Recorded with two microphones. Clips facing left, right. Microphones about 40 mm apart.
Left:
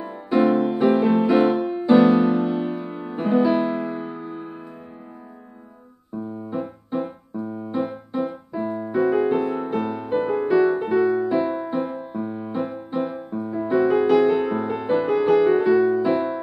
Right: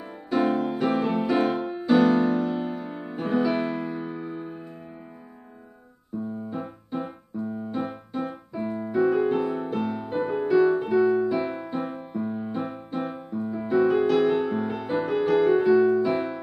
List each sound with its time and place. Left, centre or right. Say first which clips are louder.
0.6 s music: left 6 dB; centre
2.9 s music: left 6 dB; centre
3.4 s music: left 5 dB; left
3.8 s music: left 3 dB; centre
6.5 s keyboard: left 5 dB; centre
8.5 s music: left 2 dB; centre
14.0 s music: left 4 dB; left
14.5 s music: left 5 dB; centre
15.7 s music: left 2 dB; centre